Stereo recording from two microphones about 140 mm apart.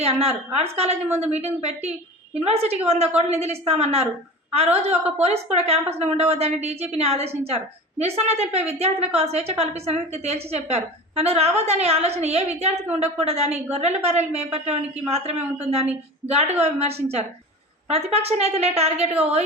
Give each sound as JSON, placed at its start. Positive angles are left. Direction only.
{"t": 0.0, "sound": "a woman's voice", "side_deg": -45}